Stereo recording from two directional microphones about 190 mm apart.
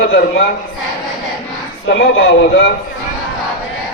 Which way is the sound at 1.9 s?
60° left (ahead or behind).